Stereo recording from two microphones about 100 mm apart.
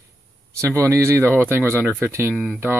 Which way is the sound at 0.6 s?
30° right (ahead or behind).